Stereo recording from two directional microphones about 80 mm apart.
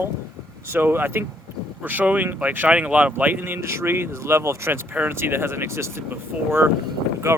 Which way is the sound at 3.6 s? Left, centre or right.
Right.